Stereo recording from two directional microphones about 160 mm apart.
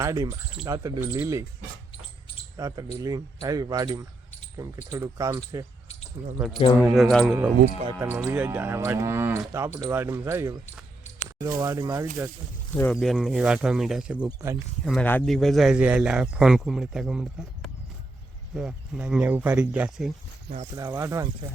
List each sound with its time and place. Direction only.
0.0 s speech: 20° right (ahead or behind)
2.6 s speech: 20° right (ahead or behind)
6.8 s a man's voice: centre (ahead or behind)
7.3 s speech: 15° right (ahead or behind)
11.6 s speech: 25° right (ahead or behind)
12.9 s a man's voice: centre (ahead or behind)
14.3 s speech: 20° right (ahead or behind)
14.8 s a man's voice: 10° left (ahead or behind)
20.7 s speech: 25° right (ahead or behind)